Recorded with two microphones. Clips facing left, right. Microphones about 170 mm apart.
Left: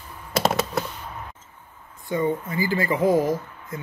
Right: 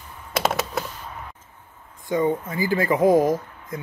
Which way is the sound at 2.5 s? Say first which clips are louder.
Right 3 dB; 15° right (ahead or behind).